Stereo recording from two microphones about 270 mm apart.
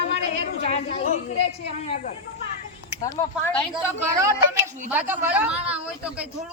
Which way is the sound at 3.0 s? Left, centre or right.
Centre.